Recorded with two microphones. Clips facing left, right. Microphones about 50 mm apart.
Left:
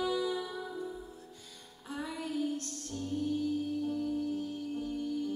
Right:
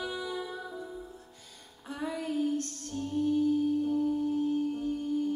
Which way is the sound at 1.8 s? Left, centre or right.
Right.